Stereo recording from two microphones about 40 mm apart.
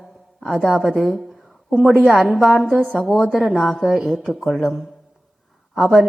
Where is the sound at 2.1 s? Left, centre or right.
Centre.